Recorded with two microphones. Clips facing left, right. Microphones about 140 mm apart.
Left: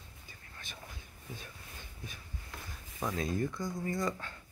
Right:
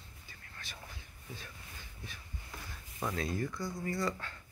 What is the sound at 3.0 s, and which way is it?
Speech, 20° left (ahead or behind).